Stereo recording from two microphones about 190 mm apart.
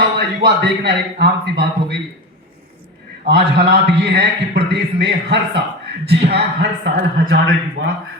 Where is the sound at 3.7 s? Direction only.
60° right (ahead or behind).